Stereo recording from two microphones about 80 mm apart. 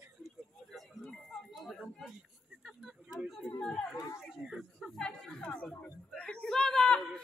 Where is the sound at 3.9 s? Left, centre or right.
Left.